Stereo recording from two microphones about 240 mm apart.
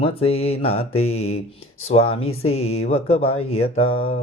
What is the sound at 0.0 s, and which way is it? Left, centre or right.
Mantra, left.